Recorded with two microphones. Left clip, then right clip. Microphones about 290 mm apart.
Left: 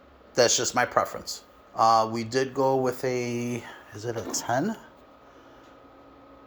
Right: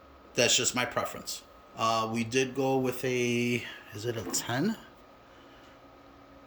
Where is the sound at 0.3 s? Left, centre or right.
Centre.